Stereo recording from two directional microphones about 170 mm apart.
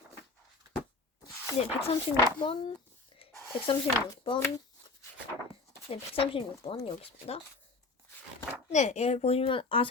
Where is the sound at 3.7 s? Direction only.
30° left (ahead or behind).